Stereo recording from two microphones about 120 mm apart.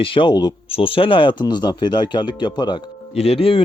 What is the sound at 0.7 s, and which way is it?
Speech, 50° left (ahead or behind).